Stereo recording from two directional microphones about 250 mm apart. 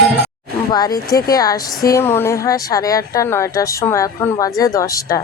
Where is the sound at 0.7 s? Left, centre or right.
Centre.